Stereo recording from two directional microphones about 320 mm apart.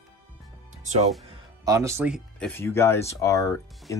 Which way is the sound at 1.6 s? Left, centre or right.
Centre.